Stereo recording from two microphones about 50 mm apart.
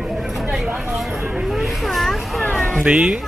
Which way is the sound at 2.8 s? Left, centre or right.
Centre.